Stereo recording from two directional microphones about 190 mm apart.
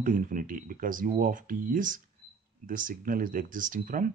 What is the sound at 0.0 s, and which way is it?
Speech, 45° right (ahead or behind).